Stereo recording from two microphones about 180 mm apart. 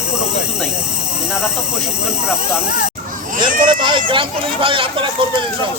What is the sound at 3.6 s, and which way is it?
Speech, 25° right (ahead or behind).